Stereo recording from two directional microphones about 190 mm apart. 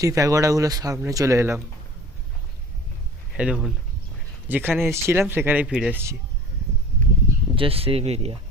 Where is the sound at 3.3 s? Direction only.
5° right (ahead or behind).